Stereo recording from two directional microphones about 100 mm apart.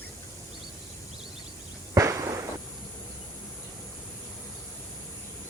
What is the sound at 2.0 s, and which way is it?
Firecracker, 35° right (ahead or behind).